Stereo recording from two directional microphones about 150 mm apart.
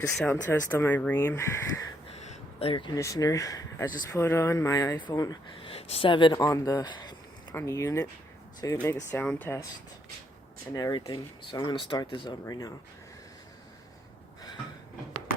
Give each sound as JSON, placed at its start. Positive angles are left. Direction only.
{"t": 0.3, "sound": "speech", "side_deg": 15}
{"t": 2.0, "sound": "a sound", "side_deg": 45}
{"t": 2.9, "sound": "speech", "side_deg": 20}
{"t": 5.5, "sound": "speech", "side_deg": 40}
{"t": 10.8, "sound": "speech", "side_deg": 25}